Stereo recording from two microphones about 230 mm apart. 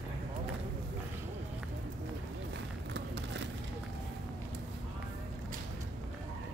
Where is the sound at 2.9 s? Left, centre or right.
Right.